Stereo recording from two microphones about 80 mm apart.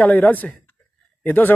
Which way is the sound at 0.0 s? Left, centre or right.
Centre.